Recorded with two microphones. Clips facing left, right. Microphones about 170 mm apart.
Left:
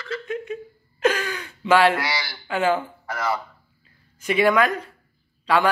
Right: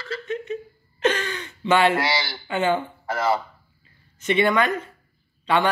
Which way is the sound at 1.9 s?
25° right (ahead or behind).